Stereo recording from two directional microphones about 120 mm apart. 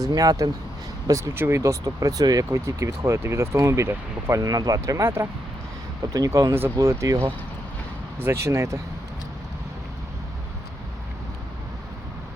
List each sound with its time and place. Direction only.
0.0 s speech: 30° right (ahead or behind)